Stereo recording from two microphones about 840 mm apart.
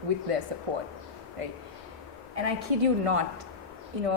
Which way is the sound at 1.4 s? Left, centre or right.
Right.